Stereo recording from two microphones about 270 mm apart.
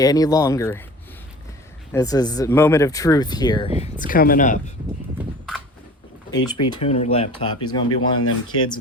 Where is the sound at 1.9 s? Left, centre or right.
Centre; by 4.7 s left.